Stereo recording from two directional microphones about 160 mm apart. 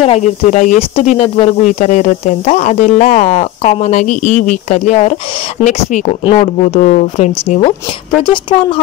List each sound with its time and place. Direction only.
0.0 s speech: 45° left (ahead or behind)
6.7 s speech: 50° left (ahead or behind)
8.2 s speech: 30° left (ahead or behind)